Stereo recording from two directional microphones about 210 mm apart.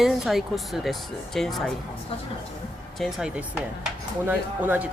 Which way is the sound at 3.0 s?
Centre (ahead or behind).